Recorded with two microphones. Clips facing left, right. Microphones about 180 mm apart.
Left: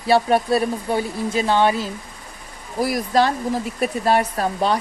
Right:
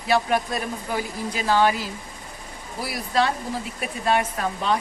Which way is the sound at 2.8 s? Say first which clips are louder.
Left 5 dB; 45° left (ahead or behind).